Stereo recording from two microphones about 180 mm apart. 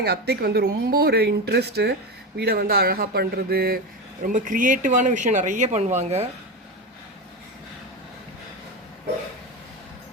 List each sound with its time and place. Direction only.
0.0 s speech: 60° right (ahead or behind)
4.2 s speech: 45° right (ahead or behind)